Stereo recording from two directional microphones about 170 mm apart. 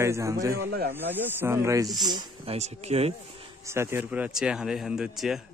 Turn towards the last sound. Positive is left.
turn(degrees=-5)  # may be behind; listen again after turning